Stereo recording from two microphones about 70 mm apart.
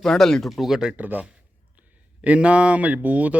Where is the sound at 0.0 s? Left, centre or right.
Centre.